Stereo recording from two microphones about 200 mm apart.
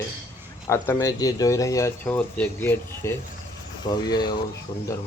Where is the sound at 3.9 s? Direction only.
20° left (ahead or behind).